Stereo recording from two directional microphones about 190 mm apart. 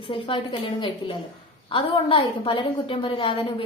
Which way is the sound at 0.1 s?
25° left (ahead or behind).